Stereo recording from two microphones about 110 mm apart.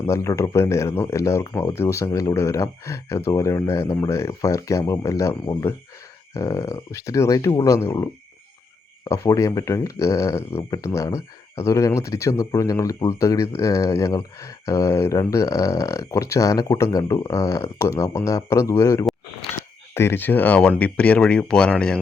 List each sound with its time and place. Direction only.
0.0 s speech: 25° left (ahead or behind); by 21.9 s 10° left (ahead or behind)